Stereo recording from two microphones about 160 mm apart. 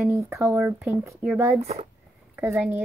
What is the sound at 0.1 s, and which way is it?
A woman's voice, 15° right (ahead or behind).